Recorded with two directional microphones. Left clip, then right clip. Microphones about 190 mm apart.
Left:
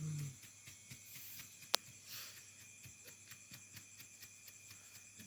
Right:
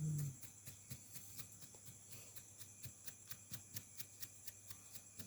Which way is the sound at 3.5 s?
65° right (ahead or behind).